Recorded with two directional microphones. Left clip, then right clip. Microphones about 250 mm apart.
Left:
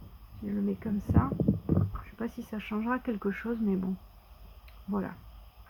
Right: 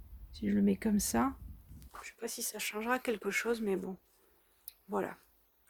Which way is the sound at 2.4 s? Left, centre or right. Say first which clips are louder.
Left 1 dB; right.